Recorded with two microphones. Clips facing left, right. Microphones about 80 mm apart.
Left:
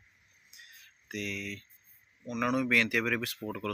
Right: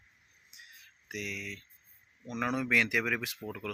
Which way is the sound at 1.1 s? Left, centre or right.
Centre.